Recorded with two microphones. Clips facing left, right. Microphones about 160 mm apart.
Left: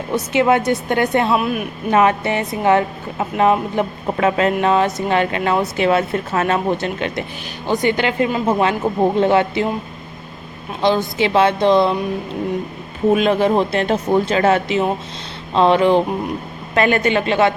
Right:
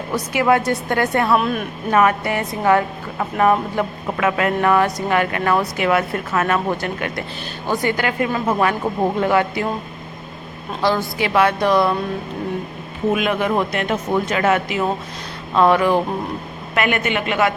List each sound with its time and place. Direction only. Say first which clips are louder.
0.1 s a woman's voice: left 2 dB; 20° left (ahead or behind)
1.4 s speech: even; 5° left (ahead or behind)
1.9 s a woman's voice: left 1 dB; 25° left (ahead or behind)
10.8 s a woman's voice: left 3 dB; 25° left (ahead or behind)
13.1 s a woman's voice: left 4 dB; 30° left (ahead or behind)